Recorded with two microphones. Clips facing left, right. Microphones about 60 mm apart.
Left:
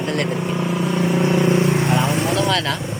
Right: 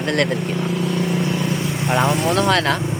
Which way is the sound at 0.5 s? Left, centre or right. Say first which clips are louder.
Left 1 dB; left.